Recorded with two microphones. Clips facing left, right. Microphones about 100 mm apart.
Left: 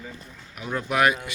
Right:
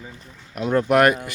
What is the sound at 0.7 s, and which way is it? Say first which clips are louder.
Speech: right 6 dB; 55° right (ahead or behind).